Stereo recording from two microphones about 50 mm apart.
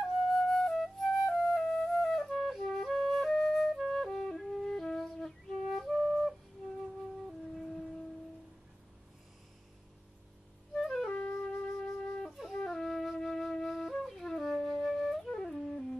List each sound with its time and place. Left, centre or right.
0.0 s flute: centre
10.8 s music: centre
11.1 s flute: left
11.3 s wind instrument: centre
12.3 s wind instrument: centre
12.5 s flute: centre